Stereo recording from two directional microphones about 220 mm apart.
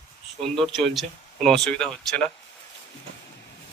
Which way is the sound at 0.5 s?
Centre (ahead or behind).